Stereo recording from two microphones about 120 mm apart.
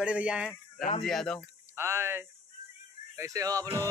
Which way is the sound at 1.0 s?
5° left (ahead or behind).